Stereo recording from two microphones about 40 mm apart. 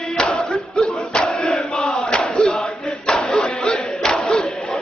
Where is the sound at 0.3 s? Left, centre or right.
Left.